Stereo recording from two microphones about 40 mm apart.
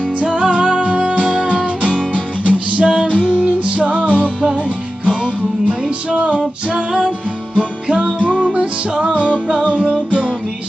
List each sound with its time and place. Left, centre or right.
0.2 s music: right
1.4 s music: left
1.6 s music: right
4.4 s music: right